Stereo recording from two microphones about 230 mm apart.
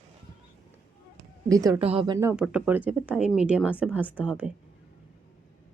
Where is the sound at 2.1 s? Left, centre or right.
Centre.